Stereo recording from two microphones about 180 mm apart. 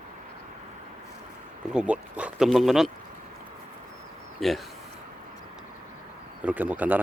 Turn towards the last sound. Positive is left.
turn(degrees=-10)  # may be behind; listen again after turning